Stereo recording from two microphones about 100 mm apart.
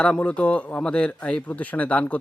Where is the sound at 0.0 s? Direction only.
10° left (ahead or behind).